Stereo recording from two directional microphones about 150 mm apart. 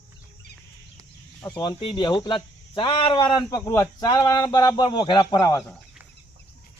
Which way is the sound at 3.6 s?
20° left (ahead or behind).